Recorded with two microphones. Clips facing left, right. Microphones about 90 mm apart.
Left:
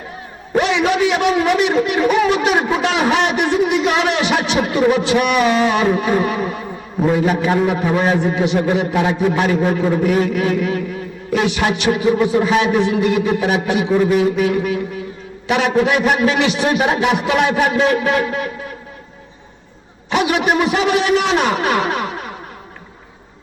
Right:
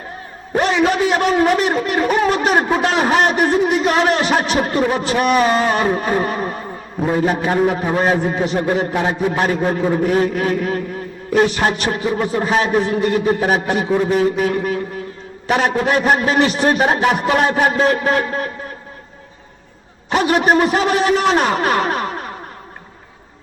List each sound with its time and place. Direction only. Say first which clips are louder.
0.5 s a man's voice: even; 40° right (ahead or behind)
20.1 s a man's voice: right 2 dB; 40° right (ahead or behind)